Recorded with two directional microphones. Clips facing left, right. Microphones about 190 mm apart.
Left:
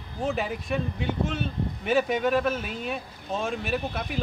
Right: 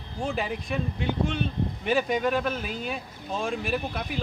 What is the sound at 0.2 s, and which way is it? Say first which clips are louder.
Speech: left 1 dB; centre (ahead or behind).